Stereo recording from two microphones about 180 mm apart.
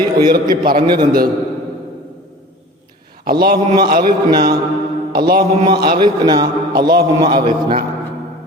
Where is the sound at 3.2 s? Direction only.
55° right (ahead or behind).